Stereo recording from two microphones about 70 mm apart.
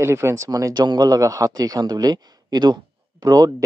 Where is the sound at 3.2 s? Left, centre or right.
Right.